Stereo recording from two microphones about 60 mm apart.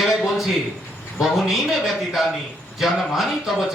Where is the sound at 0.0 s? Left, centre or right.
Centre.